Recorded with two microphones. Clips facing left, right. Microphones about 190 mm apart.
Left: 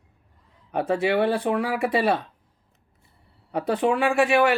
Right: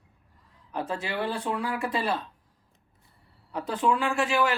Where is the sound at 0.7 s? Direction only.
65° left (ahead or behind).